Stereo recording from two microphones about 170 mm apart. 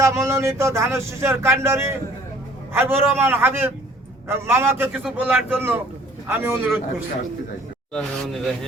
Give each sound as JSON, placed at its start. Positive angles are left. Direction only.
{"t": 0.0, "sound": "speech", "side_deg": -15}
{"t": 7.9, "sound": "speech", "side_deg": 0}